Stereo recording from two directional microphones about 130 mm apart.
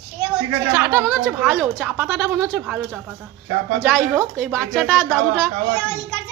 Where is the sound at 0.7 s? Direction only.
10° right (ahead or behind).